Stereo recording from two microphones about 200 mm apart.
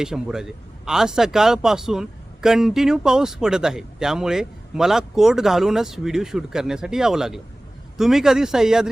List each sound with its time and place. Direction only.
0.0 s a man's voice: 5° right (ahead or behind)